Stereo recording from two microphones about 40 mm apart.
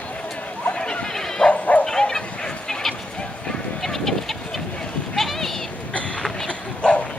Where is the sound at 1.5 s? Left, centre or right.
Left.